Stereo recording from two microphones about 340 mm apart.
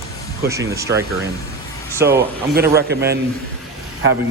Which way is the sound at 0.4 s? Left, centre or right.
Centre.